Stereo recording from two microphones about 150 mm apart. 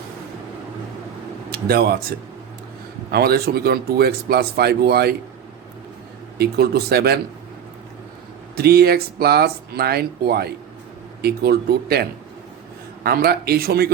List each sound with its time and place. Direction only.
1.5 s speech: 90° right
6.4 s speech: 90° right
8.5 s speech: 90° right